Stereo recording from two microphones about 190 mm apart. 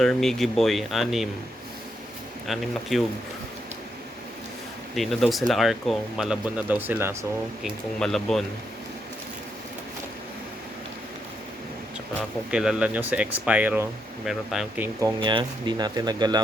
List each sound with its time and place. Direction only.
0.0 s speech: centre (ahead or behind)
2.5 s speech: centre (ahead or behind)
4.9 s speech: centre (ahead or behind)
7.6 s speech: centre (ahead or behind)
12.5 s speech: 5° right (ahead or behind)
15.0 s speech: 25° right (ahead or behind)